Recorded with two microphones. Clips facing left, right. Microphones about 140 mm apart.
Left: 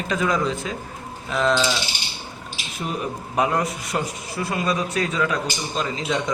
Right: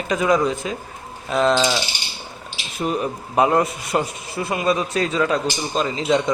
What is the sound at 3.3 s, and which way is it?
A man's voice, 30° right (ahead or behind).